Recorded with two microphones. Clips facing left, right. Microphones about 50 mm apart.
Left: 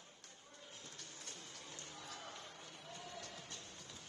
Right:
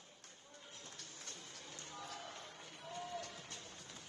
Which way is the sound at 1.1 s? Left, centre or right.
Centre.